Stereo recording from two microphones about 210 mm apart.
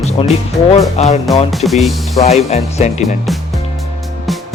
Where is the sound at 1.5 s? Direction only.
Centre (ahead or behind).